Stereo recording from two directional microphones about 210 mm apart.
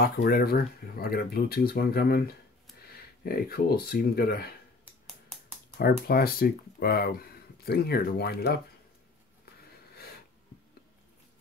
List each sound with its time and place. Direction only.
0.0 s speech: 45° left (ahead or behind)
5.8 s speech: 45° left (ahead or behind)